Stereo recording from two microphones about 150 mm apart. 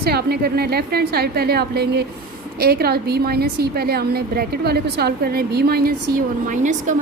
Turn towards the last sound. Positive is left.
turn(degrees=-55)  # may be behind; listen again after turning